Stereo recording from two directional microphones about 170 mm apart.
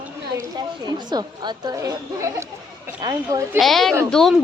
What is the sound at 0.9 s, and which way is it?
A woman's voice, 25° right (ahead or behind).